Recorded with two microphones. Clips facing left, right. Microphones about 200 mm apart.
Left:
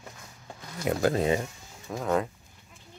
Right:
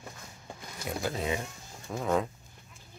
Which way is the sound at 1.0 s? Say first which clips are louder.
Left 7 dB; 50° left (ahead or behind).